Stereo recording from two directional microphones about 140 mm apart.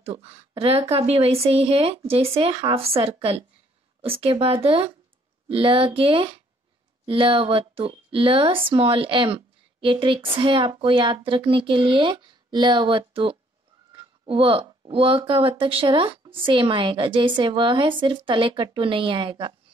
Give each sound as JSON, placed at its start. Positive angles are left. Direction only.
{"t": 0.0, "sound": "a woman's voice", "side_deg": -45}